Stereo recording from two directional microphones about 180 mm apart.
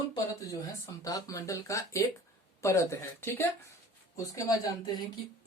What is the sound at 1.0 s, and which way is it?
Speech, 20° left (ahead or behind).